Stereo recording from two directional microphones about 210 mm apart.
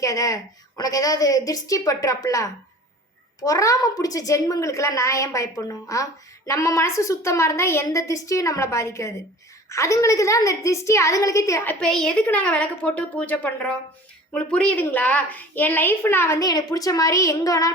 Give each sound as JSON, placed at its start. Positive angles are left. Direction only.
{"t": 0.0, "sound": "a woman's voice", "side_deg": 15}